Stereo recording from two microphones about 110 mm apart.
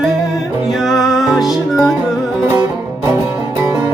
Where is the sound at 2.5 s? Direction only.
20° right (ahead or behind).